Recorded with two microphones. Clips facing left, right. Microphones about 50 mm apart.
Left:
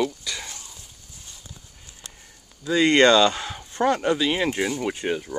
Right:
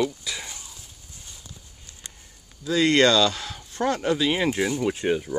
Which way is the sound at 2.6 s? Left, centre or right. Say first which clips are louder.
Left 2 dB; centre.